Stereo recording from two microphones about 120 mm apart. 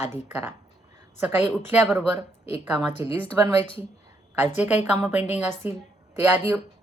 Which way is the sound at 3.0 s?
25° right (ahead or behind).